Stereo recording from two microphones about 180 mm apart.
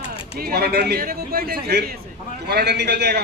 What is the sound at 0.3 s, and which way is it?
A man's voice, 60° right (ahead or behind).